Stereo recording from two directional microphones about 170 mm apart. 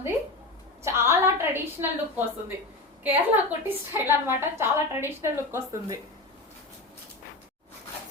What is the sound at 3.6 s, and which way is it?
A woman's voice, 15° right (ahead or behind).